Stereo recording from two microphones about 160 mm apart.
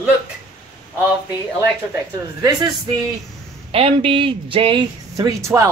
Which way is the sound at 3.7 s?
35° right (ahead or behind).